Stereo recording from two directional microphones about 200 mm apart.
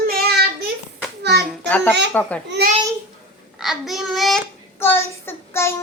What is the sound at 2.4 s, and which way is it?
Speech, 55° right (ahead or behind).